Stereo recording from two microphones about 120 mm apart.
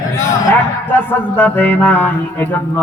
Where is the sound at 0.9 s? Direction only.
15° left (ahead or behind).